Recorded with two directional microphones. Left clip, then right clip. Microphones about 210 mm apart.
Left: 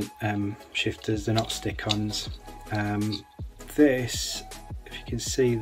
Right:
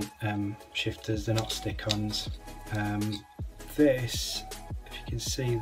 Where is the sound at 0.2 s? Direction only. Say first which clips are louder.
Left 4 dB; 20° left (ahead or behind).